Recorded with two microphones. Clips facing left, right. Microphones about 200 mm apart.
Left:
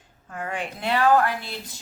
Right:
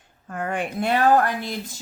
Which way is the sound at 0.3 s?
55° right (ahead or behind).